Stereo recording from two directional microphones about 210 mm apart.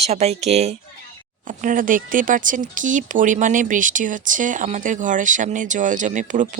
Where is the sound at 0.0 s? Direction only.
30° right (ahead or behind).